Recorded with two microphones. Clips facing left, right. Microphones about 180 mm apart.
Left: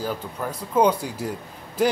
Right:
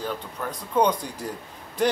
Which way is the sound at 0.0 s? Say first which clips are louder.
Left 2 dB; 5° left (ahead or behind).